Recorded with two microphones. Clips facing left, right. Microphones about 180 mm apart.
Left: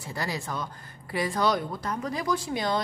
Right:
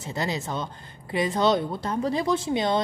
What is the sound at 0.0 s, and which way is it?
Speech, 20° right (ahead or behind).